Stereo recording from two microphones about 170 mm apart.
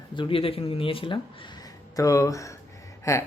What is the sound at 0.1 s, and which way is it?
Speech, 30° left (ahead or behind).